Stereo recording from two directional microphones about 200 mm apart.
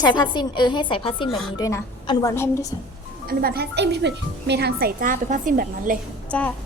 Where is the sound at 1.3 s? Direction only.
Centre (ahead or behind).